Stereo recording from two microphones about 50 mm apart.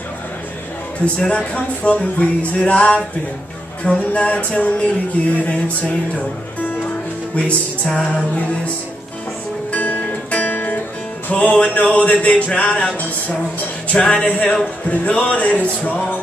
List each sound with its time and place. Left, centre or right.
1.0 s music: left
5.2 s a sound: left
5.5 s music: left
7.3 s music: left
9.7 s music: left
13.9 s music: left